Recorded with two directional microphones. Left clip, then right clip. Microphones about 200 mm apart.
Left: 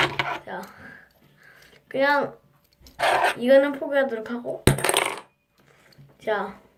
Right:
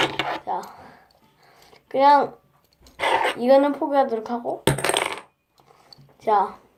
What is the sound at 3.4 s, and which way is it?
A woman's voice, 5° right (ahead or behind).